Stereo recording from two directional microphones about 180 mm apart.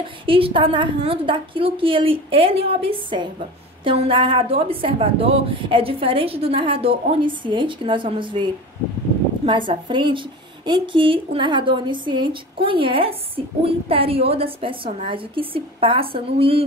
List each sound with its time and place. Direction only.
0.3 s a woman's voice: 30° right (ahead or behind)
9.5 s a woman's voice: 25° right (ahead or behind)